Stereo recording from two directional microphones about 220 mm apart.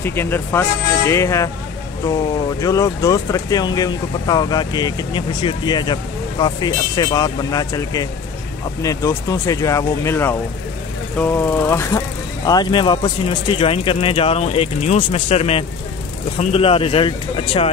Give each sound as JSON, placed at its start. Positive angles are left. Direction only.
{"t": 0.0, "sound": "speech", "side_deg": 10}
{"t": 2.6, "sound": "speech", "side_deg": 15}